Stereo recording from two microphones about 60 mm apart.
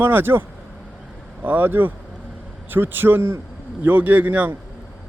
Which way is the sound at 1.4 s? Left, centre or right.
Right.